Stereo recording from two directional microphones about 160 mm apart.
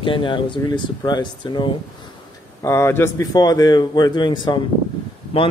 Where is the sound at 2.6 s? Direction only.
15° left (ahead or behind).